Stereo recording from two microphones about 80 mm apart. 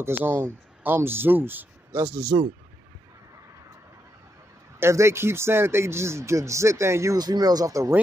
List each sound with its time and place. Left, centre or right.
0.0 s speech: right
4.7 s speech: right
7.2 s speech: right